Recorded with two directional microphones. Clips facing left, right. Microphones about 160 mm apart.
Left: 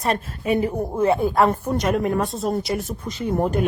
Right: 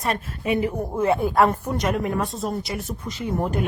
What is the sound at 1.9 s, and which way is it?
Speech, 40° left (ahead or behind).